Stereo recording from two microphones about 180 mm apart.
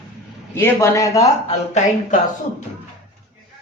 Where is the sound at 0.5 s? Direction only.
15° left (ahead or behind).